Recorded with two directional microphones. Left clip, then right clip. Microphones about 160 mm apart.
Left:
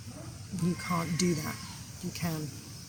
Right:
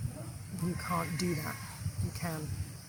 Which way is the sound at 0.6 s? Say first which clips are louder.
Left 2 dB; 15° right (ahead or behind).